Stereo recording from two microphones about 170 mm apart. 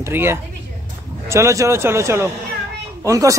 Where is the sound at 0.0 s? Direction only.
15° right (ahead or behind).